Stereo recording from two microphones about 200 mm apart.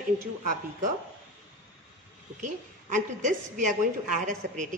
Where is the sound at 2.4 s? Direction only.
40° right (ahead or behind).